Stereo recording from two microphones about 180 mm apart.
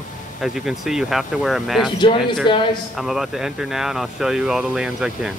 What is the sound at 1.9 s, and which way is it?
Speech, 30° left (ahead or behind).